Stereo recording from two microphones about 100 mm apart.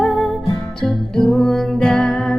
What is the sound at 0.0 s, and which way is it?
Music, 5° left (ahead or behind).